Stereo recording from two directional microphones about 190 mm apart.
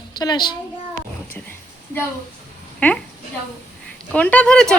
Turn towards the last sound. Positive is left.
turn(degrees=5)  # may be behind; listen again after turning